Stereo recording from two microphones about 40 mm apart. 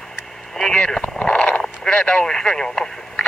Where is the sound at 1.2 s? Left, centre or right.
Left.